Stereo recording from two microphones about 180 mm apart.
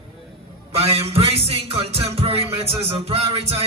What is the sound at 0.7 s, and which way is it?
A man's voice, 35° right (ahead or behind).